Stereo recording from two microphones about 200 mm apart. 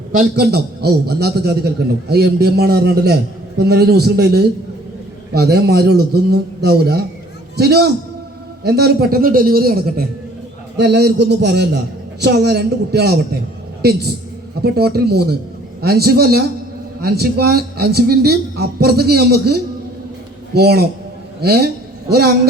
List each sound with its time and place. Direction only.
0.1 s a man's voice: 50° right (ahead or behind)
14.6 s a man's voice: 50° right (ahead or behind)